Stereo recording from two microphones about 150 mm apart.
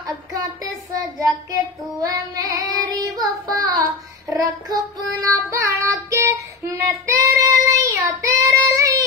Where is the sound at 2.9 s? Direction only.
25° right (ahead or behind).